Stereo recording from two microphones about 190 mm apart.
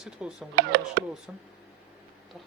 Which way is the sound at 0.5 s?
65° right (ahead or behind).